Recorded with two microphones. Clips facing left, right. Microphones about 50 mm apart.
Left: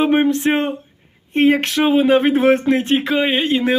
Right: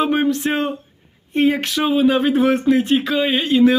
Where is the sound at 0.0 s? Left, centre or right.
Left.